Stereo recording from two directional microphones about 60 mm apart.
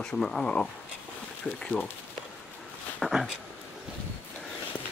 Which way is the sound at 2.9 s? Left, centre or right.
Centre.